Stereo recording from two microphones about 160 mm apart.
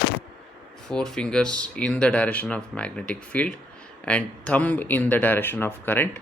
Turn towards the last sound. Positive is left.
turn(degrees=10)  # may be behind; listen again after turning